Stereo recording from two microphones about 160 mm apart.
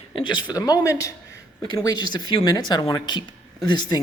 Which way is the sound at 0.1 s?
30° left (ahead or behind).